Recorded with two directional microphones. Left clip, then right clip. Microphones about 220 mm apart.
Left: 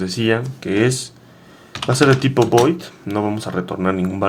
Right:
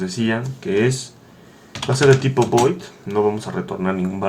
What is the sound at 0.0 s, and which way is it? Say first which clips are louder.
Speech: left 4 dB; 50° left (ahead or behind).